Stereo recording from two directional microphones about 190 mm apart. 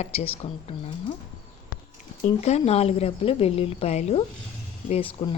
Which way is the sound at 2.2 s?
35° left (ahead or behind).